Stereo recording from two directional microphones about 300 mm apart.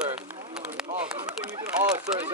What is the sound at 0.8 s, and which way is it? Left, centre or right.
Speech, centre.